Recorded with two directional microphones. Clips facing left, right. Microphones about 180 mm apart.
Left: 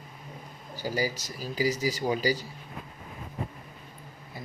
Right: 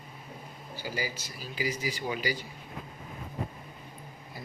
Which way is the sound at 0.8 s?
40° left (ahead or behind).